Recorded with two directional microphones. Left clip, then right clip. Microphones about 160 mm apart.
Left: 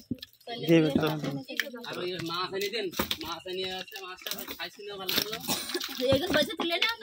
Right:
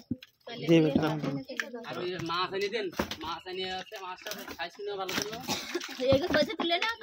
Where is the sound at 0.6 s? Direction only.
5° left (ahead or behind).